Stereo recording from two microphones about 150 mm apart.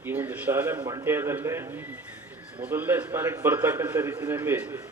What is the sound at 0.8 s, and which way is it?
Speech, 30° right (ahead or behind).